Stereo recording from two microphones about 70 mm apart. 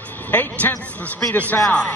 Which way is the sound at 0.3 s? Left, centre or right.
Left.